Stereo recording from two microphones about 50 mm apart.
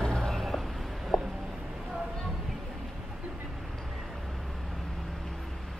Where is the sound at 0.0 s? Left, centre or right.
Centre.